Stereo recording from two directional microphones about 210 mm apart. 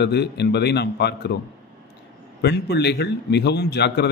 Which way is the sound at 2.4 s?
55° left (ahead or behind).